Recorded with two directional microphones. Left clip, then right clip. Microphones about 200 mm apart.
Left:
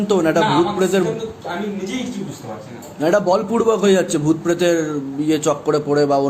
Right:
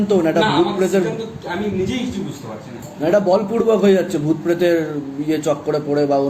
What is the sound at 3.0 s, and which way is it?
A man's voice, 50° left (ahead or behind).